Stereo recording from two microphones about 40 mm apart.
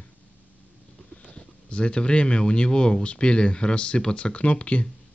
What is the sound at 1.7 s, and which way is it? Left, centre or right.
A man's voice, left.